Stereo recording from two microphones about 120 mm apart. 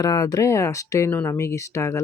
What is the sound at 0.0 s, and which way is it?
Speech, 30° left (ahead or behind).